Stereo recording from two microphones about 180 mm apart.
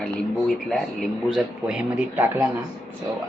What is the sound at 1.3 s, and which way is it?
Speech, 5° right (ahead or behind).